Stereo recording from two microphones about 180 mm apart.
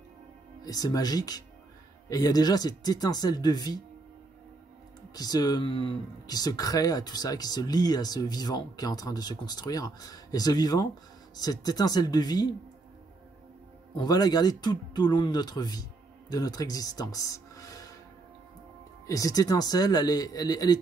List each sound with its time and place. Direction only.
0.7 s speech: 20° left (ahead or behind)
5.1 s speech: 20° left (ahead or behind)
13.9 s speech: 20° left (ahead or behind)
19.0 s speech: 20° left (ahead or behind)